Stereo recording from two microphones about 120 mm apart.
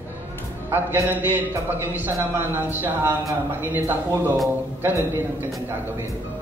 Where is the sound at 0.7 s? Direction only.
20° right (ahead or behind).